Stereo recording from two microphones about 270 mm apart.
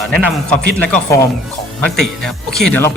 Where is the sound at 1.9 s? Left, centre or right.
Centre.